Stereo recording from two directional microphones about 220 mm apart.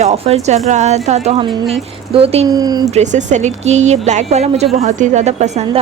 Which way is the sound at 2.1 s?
25° right (ahead or behind).